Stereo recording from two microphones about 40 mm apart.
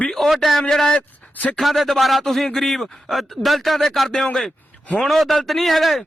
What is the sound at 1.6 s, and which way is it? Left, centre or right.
A man's voice, centre.